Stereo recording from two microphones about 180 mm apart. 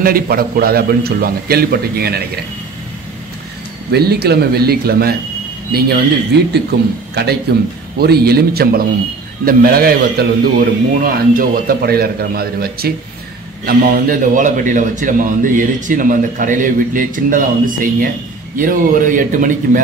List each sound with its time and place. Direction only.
0.0 s a man's voice: 55° right (ahead or behind)
3.9 s a man's voice: 60° right (ahead or behind)
7.2 s a man's voice: 65° right (ahead or behind); by 19.8 s 50° right (ahead or behind)